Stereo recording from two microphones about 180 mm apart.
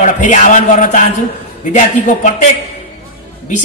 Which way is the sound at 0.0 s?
45° left (ahead or behind).